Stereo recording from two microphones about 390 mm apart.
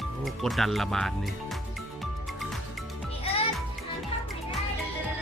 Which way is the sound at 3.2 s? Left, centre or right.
Centre.